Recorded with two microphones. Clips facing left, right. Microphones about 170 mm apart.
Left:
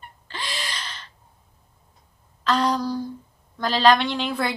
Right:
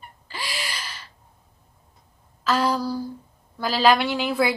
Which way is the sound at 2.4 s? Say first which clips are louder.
Even; 5° right (ahead or behind).